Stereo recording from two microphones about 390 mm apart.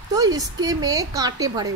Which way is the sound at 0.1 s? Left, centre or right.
Centre.